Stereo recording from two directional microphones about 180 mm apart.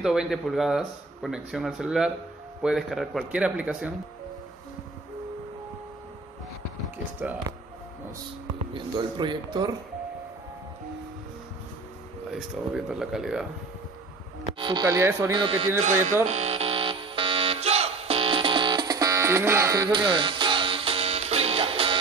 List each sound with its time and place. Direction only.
0.0 s speech: 5° right (ahead or behind)
7.5 s speech: 25° right (ahead or behind)
8.7 s speech: 25° right (ahead or behind)
12.3 s speech: centre (ahead or behind)
14.4 s speech: 25° right (ahead or behind)
15.3 s speech: 30° right (ahead or behind)
15.8 s speech: 45° right (ahead or behind)
16.3 s music: 35° right (ahead or behind)